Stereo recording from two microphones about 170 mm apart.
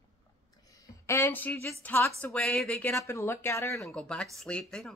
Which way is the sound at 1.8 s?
10° left (ahead or behind).